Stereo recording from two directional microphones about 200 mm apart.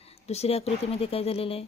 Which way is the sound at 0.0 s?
30° left (ahead or behind).